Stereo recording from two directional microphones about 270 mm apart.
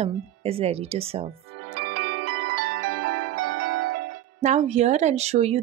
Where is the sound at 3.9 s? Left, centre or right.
Right.